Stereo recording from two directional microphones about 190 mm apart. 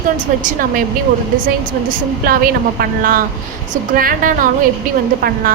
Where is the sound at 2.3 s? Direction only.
50° right (ahead or behind).